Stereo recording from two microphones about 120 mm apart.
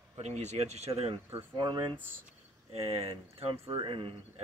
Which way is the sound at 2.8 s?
55° right (ahead or behind).